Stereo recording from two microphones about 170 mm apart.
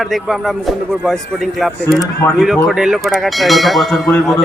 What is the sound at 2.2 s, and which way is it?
Speech, 10° left (ahead or behind).